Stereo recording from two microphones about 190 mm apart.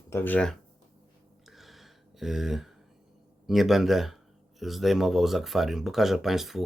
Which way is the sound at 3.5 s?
Centre (ahead or behind).